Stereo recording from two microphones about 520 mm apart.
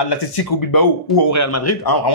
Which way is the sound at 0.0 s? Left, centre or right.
Left.